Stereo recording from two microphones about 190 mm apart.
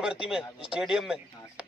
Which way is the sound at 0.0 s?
5° right (ahead or behind).